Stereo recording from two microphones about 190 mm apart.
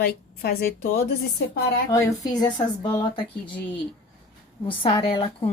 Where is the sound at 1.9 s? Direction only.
15° left (ahead or behind).